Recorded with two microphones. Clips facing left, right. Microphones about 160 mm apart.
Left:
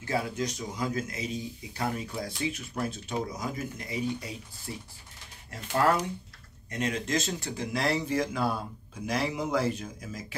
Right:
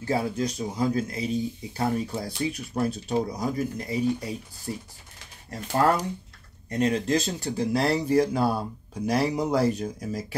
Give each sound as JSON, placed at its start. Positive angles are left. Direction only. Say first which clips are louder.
{"t": 0.0, "sound": "speech", "louder": "right 4 dB", "side_deg": -30}